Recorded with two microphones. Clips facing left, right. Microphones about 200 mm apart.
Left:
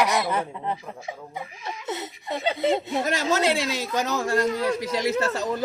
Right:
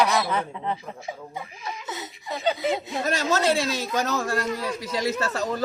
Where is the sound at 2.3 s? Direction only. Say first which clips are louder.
Left 2 dB; 25° left (ahead or behind).